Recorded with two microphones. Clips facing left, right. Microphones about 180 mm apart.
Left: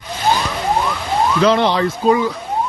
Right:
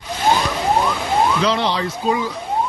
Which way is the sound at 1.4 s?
55° left (ahead or behind).